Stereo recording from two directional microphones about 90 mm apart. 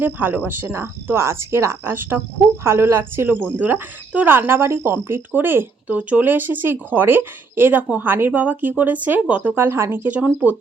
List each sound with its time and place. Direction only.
0.0 s speech: 25° right (ahead or behind)